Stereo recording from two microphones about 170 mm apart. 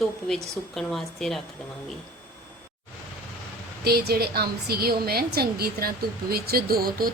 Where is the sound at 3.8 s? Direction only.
65° right (ahead or behind).